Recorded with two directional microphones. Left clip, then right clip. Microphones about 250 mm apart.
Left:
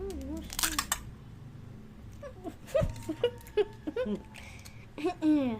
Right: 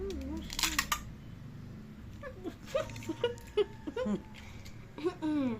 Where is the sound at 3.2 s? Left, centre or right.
Left.